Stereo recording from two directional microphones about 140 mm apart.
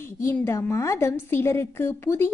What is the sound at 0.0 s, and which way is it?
A woman's voice, 20° left (ahead or behind).